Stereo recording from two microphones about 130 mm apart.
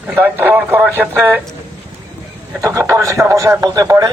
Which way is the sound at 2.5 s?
25° right (ahead or behind).